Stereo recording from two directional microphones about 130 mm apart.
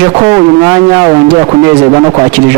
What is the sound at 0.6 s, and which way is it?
A man's voice, 20° right (ahead or behind).